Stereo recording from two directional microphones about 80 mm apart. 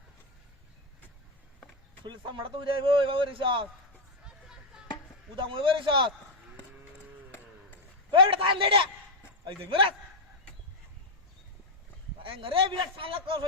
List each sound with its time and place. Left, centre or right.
2.0 s a man's voice: right
4.3 s chop: centre
5.4 s a man's voice: right
8.1 s a man's voice: right
12.3 s a man's voice: right